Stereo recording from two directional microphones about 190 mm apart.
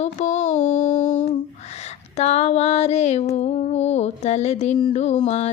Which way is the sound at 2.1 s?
35° left (ahead or behind).